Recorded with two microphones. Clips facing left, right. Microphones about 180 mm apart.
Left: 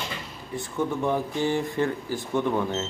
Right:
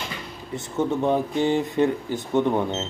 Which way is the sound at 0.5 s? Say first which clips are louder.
Right 3 dB; 20° right (ahead or behind).